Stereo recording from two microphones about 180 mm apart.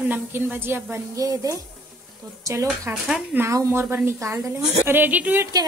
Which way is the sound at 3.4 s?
15° right (ahead or behind).